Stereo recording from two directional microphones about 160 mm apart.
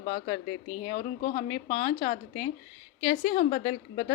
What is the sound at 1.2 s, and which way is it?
Speech, 65° left (ahead or behind).